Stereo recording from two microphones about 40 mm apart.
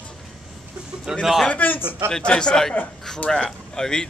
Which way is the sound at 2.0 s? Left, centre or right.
Left.